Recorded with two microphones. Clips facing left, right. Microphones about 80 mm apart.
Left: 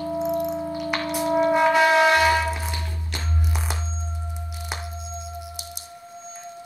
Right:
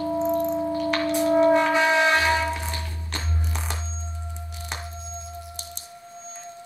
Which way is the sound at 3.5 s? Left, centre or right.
Centre.